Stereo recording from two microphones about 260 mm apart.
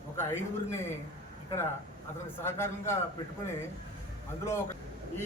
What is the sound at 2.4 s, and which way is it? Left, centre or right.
Speech, centre.